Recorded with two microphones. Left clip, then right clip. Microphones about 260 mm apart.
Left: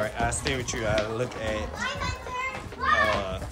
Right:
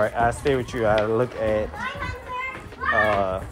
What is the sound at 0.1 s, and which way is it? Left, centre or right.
Speech, centre.